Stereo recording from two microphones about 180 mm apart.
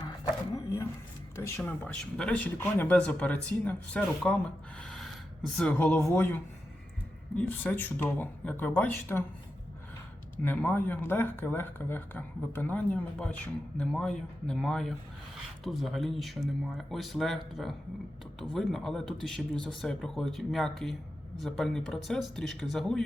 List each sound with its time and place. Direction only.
0.5 s dog: 20° left (ahead or behind)
1.4 s speech: 15° left (ahead or behind)
4.8 s gasp: 5° left (ahead or behind)
5.5 s speech: 5° left (ahead or behind)
10.4 s speech: 10° left (ahead or behind)